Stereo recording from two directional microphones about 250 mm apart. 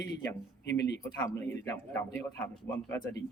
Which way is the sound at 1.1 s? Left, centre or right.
Centre.